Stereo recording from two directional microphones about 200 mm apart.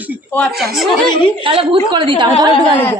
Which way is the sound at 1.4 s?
25° right (ahead or behind).